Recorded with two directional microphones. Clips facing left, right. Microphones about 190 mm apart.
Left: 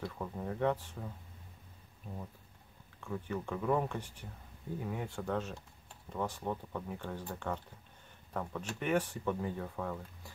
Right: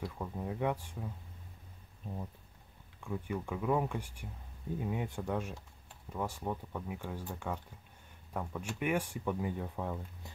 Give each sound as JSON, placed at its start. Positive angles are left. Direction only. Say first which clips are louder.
{"t": 0.2, "sound": "speech", "louder": "left 2 dB", "side_deg": -10}
{"t": 3.0, "sound": "speech", "louder": "right 1 dB", "side_deg": -10}